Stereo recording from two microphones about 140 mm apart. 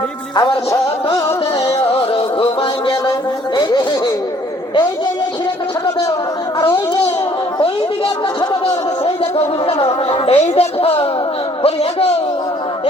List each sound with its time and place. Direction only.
0.3 s music: 25° left (ahead or behind)
1.6 s music: 45° left (ahead or behind)
7.6 s a sound: 40° left (ahead or behind)
9.8 s speech: 45° left (ahead or behind)